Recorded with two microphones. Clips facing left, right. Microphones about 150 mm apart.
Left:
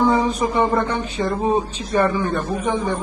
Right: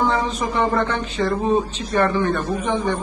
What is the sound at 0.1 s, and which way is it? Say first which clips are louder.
A man's voice: left 3 dB; 15° left (ahead or behind).